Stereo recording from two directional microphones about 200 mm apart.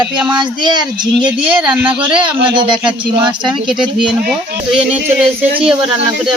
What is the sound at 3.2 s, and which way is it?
Speech, 25° right (ahead or behind).